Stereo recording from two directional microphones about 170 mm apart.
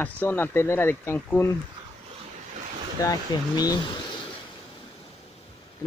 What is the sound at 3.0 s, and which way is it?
Speech, 20° left (ahead or behind).